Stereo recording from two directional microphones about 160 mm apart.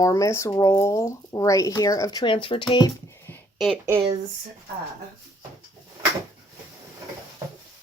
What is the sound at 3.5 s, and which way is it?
Speech, centre (ahead or behind).